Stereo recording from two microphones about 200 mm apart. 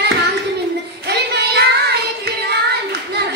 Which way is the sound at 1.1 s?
55° right (ahead or behind).